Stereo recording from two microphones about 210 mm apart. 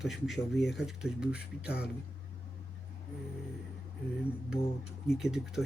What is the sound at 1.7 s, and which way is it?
Speech, 50° left (ahead or behind).